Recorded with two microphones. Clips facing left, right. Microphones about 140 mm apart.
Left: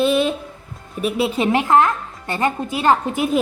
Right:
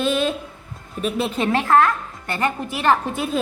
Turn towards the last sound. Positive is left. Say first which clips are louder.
# left 3 dB
turn(degrees=15)  # may be behind; listen again after turning